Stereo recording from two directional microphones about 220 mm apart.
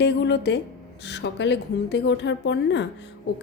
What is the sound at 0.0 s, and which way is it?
A woman's voice, 50° left (ahead or behind).